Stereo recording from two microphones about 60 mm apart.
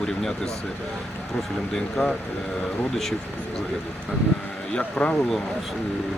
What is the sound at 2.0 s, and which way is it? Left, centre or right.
Speech, left.